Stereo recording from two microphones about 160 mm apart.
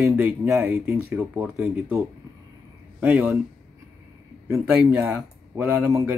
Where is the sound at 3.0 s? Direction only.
10° right (ahead or behind).